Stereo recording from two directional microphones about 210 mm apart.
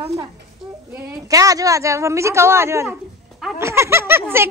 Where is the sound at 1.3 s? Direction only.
15° right (ahead or behind).